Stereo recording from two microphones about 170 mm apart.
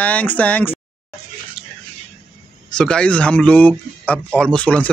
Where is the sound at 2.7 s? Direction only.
5° left (ahead or behind).